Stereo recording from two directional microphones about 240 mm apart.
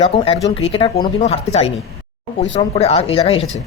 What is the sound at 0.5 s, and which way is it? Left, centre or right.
Speech, left.